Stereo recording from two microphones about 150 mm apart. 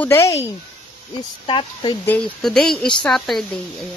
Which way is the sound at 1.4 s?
35° left (ahead or behind).